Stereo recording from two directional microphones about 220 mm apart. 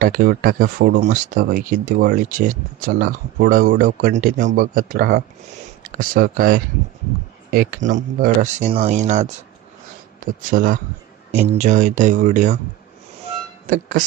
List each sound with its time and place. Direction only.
0.0 s speech: 40° right (ahead or behind)
10.5 s speech: 35° right (ahead or behind)